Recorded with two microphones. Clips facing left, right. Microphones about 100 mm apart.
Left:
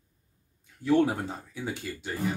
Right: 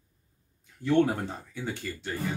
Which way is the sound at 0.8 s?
10° left (ahead or behind).